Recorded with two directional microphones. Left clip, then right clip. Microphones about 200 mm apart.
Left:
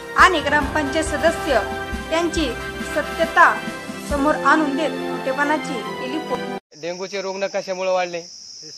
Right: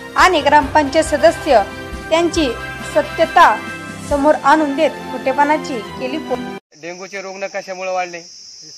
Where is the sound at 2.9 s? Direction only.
25° right (ahead or behind).